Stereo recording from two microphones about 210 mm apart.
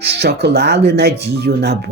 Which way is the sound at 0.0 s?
50° right (ahead or behind).